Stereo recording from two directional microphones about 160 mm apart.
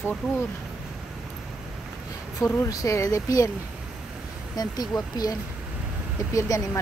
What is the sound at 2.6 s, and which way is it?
Speech, 20° left (ahead or behind).